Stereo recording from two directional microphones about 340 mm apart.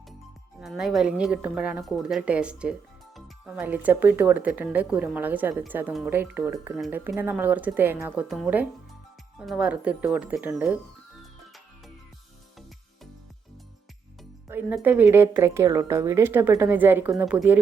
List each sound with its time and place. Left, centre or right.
0.6 s speech: centre
14.4 s speech: centre